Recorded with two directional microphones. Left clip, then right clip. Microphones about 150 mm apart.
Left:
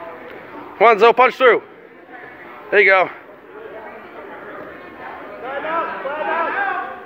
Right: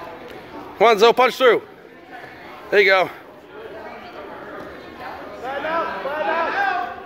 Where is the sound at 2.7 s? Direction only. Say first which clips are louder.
Left 2 dB; 25° right (ahead or behind).